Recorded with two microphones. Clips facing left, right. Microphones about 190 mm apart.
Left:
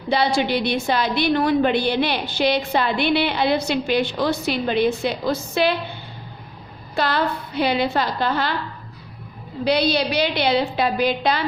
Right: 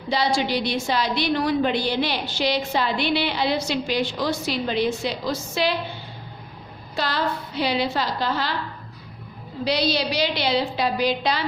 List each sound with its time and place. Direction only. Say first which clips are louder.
0.1 s a woman's voice: left 3 dB; 60° left (ahead or behind)
6.9 s a woman's voice: left 4 dB; 55° left (ahead or behind)
9.6 s a woman's voice: left 3 dB; 55° left (ahead or behind)